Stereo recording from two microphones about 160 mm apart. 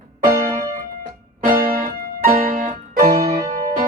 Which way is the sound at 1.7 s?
60° right (ahead or behind).